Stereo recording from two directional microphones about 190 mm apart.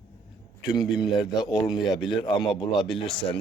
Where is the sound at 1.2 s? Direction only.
20° left (ahead or behind).